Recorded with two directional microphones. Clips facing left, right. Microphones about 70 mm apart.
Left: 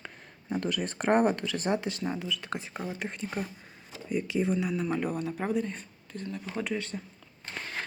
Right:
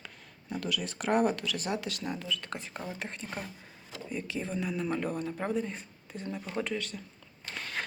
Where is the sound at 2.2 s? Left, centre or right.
Centre.